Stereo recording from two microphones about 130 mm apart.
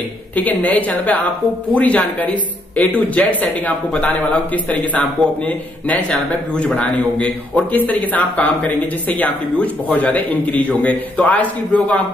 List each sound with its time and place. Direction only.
0.4 s a man's voice: 10° left (ahead or behind)